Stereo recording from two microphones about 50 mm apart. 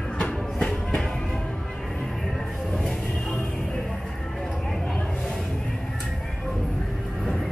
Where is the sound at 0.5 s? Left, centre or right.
Left.